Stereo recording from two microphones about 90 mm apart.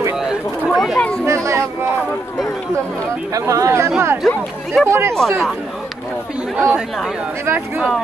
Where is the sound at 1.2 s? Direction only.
35° right (ahead or behind).